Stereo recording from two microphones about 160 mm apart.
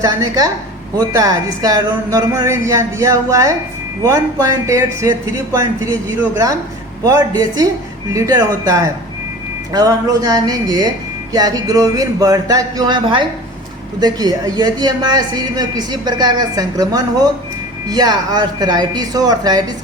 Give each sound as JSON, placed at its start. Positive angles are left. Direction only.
{"t": 0.0, "sound": "speech", "side_deg": -20}